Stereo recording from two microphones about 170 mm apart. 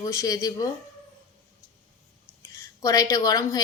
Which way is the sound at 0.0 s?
20° left (ahead or behind).